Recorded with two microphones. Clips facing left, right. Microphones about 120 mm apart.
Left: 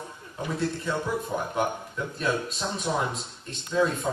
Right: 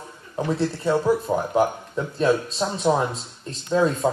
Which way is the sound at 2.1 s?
35° right (ahead or behind).